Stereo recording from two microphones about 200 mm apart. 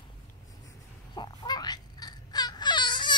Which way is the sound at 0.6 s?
20° left (ahead or behind).